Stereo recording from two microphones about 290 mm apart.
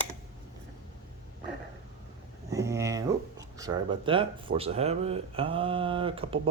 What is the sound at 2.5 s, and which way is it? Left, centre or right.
Speech, centre.